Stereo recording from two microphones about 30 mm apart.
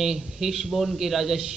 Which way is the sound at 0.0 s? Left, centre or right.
Centre.